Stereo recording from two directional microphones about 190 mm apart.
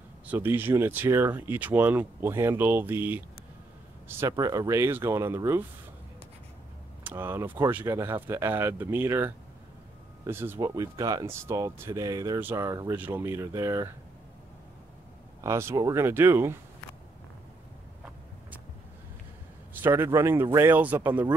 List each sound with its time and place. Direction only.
0.3 s speech: 10° right (ahead or behind)
4.2 s speech: 20° right (ahead or behind)
7.0 s speech: 10° right (ahead or behind)
15.4 s speech: 15° right (ahead or behind)
19.7 s a man's voice: 10° right (ahead or behind)